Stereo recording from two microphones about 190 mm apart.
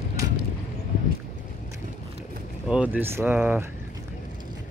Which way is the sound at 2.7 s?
10° right (ahead or behind).